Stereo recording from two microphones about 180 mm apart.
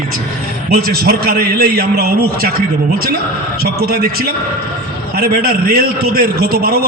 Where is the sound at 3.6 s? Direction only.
60° right (ahead or behind).